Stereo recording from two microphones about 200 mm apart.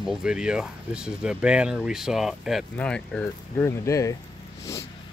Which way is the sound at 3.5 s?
15° left (ahead or behind).